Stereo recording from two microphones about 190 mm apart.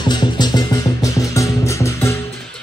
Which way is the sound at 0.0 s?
25° left (ahead or behind).